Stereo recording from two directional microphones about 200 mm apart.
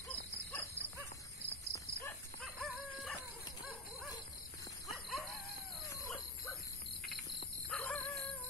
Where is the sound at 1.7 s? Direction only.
15° left (ahead or behind).